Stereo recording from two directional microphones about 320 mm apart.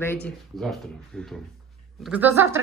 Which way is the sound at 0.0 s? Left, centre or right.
Centre.